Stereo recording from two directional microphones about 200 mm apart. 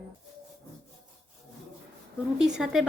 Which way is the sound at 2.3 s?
5° right (ahead or behind).